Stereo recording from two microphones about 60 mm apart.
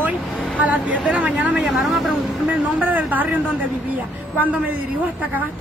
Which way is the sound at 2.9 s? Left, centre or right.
Right.